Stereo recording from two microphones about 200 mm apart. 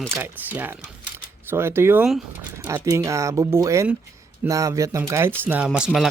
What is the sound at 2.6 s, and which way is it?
Speech, 15° right (ahead or behind).